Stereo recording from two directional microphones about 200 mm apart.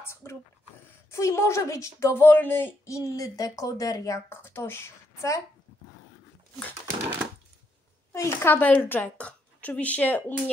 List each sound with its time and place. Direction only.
0.0 s a woman's voice: 15° left (ahead or behind)
8.1 s a woman's voice: 10° left (ahead or behind)